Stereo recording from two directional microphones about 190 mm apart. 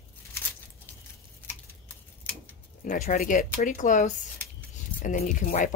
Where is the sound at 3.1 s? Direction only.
45° left (ahead or behind).